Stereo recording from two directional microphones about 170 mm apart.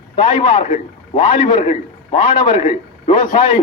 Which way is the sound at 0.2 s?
30° left (ahead or behind).